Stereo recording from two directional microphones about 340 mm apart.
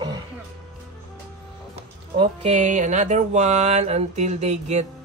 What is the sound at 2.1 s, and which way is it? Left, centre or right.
Mantra, centre.